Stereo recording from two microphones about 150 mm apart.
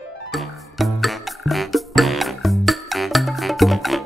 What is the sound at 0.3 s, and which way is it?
Music, centre (ahead or behind).